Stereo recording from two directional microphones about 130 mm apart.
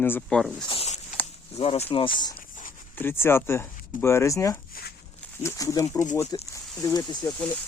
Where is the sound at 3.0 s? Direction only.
15° left (ahead or behind).